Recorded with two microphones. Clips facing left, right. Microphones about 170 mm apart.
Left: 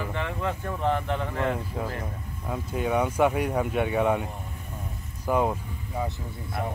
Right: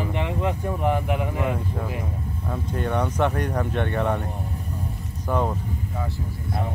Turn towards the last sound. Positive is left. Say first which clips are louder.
# even
turn(degrees=10)  # may be behind; listen again after turning